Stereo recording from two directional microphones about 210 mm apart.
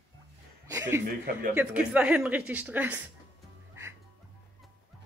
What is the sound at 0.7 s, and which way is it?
Chuckle, 15° right (ahead or behind).